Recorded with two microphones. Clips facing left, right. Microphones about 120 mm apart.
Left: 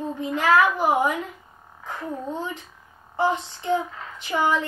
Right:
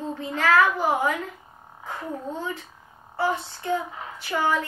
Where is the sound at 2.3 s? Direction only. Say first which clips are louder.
Left 1 dB; 15° left (ahead or behind).